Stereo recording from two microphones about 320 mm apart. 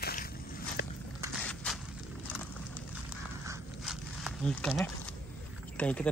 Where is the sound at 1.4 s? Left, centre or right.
Centre.